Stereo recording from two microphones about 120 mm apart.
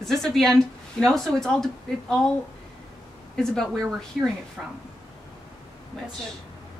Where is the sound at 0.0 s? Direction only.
5° left (ahead or behind).